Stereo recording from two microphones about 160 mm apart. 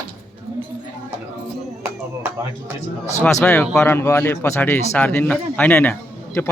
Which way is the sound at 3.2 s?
10° left (ahead or behind).